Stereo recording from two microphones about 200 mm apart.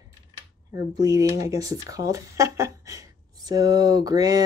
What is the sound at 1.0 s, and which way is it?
Speech, 15° right (ahead or behind).